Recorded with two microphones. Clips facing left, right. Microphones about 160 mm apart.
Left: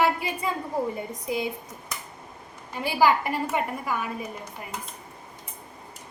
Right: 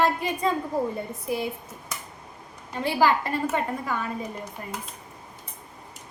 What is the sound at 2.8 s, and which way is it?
A woman's voice, 10° left (ahead or behind).